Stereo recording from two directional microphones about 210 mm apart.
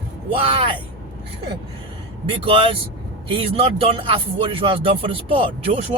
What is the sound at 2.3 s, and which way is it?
Speech, 25° right (ahead or behind).